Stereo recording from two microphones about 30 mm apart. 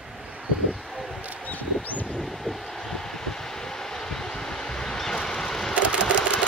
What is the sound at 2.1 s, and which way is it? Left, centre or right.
Vehicle, centre.